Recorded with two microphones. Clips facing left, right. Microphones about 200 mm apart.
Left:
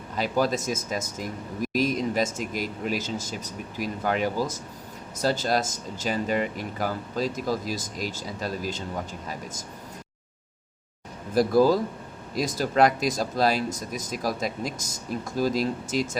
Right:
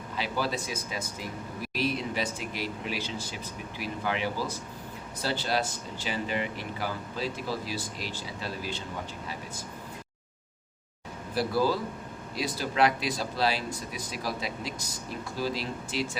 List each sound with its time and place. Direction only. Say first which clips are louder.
0.2 s speech: left 6 dB; 45° left (ahead or behind)
11.3 s speech: left 7 dB; 45° left (ahead or behind)